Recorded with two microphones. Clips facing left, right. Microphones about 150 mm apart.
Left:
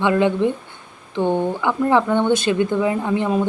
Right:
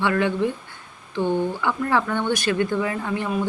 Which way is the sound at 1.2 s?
55° left (ahead or behind).